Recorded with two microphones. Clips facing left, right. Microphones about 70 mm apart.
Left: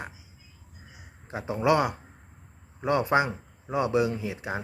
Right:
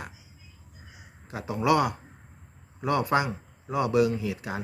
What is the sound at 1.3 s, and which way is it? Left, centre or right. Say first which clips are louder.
Speech: even; left.